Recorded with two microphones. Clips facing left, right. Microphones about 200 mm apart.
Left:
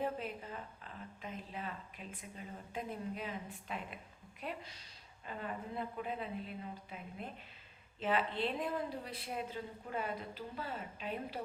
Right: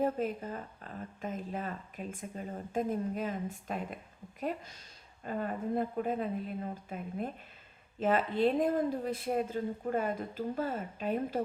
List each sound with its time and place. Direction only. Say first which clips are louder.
0.0 s a woman's voice: right 8 dB; 45° right (ahead or behind)